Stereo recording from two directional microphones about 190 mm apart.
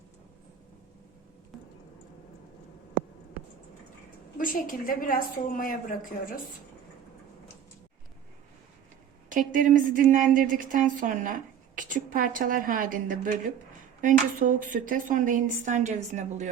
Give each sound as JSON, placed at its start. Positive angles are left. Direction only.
{"t": 4.4, "sound": "a woman's voice", "side_deg": 45}
{"t": 9.3, "sound": "a woman's voice", "side_deg": -45}